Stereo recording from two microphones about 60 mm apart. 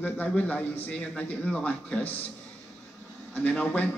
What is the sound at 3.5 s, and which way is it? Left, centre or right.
Speech, centre.